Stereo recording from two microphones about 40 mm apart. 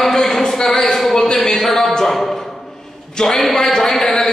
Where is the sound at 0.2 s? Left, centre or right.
Centre.